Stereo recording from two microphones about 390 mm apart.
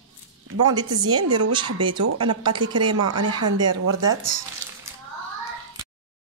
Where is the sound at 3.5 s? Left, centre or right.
Right.